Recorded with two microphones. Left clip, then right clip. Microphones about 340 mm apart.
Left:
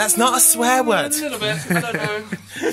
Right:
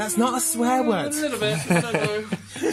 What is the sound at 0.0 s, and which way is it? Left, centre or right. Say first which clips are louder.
Speech: left 6 dB; left.